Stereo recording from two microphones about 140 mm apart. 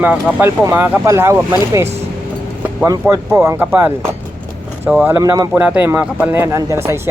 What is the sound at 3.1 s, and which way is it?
Speech, 20° right (ahead or behind).